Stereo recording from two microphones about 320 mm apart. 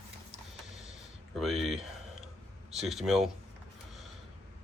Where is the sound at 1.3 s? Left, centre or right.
Centre.